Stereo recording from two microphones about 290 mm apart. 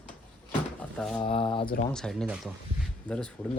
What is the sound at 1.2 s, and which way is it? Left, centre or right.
Speech, centre.